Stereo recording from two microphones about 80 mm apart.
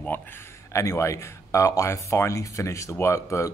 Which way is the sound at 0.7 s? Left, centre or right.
Left.